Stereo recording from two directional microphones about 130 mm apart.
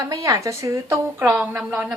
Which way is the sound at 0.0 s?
25° right (ahead or behind).